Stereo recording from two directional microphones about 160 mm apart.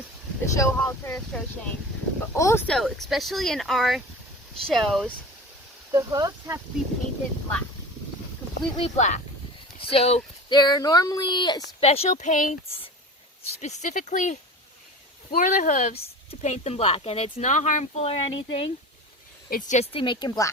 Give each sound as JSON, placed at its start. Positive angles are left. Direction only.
{"t": 0.5, "sound": "speech", "side_deg": 20}
{"t": 2.3, "sound": "speech", "side_deg": 15}
{"t": 2.6, "sound": "speech", "side_deg": 0}
{"t": 5.9, "sound": "speech", "side_deg": -20}
{"t": 8.7, "sound": "speech", "side_deg": 40}
{"t": 10.5, "sound": "speech", "side_deg": 25}
{"t": 11.8, "sound": "speech", "side_deg": 40}
{"t": 13.6, "sound": "speech", "side_deg": 45}
{"t": 19.5, "sound": "speech", "side_deg": 55}
{"t": 19.9, "sound": "speech", "side_deg": 30}